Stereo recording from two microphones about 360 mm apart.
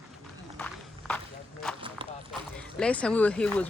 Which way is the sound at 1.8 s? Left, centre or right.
Centre.